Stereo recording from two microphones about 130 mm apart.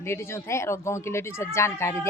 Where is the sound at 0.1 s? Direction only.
20° left (ahead or behind).